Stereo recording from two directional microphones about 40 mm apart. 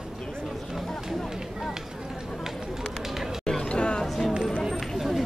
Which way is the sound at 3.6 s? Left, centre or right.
Left.